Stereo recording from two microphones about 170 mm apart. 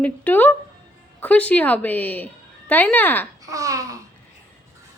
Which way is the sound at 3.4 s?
20° right (ahead or behind).